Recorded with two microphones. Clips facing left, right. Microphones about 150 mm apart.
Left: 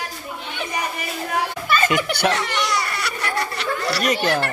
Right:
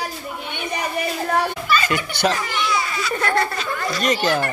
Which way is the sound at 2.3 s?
75° left (ahead or behind).